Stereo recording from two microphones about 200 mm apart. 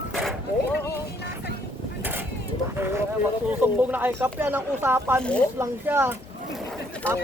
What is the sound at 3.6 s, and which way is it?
Speech, 10° right (ahead or behind).